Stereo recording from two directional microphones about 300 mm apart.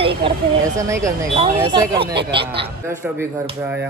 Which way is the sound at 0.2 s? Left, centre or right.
Centre.